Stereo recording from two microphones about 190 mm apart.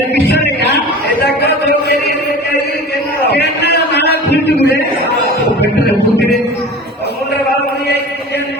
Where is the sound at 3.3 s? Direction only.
60° left (ahead or behind).